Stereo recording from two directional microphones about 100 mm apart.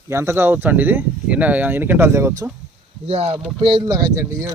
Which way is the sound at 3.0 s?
90° right.